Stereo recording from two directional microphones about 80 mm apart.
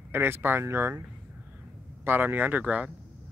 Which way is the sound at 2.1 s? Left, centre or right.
Right.